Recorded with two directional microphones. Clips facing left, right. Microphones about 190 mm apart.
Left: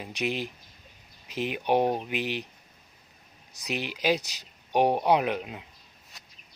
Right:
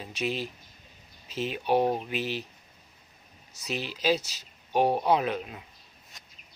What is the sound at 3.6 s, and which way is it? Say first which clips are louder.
Speech: left 1 dB; 15° left (ahead or behind).